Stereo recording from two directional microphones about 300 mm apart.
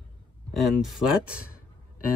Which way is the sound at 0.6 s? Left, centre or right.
Centre.